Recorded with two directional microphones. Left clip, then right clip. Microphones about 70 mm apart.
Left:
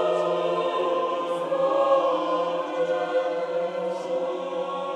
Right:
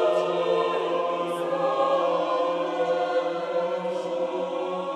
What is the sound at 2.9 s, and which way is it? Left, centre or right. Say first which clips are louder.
Choir: even; right.